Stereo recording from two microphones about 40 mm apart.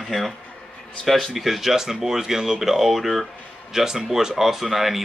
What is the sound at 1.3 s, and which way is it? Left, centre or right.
Speech, centre.